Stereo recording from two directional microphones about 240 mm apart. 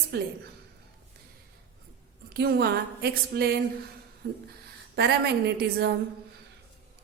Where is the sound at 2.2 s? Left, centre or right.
Right.